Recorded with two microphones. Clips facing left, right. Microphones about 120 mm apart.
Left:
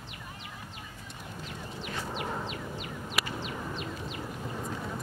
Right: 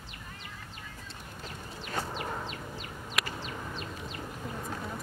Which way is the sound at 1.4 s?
40° right (ahead or behind).